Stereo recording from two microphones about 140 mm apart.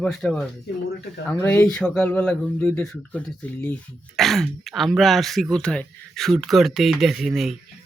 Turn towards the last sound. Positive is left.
turn(degrees=0)  # may be behind; listen again after turning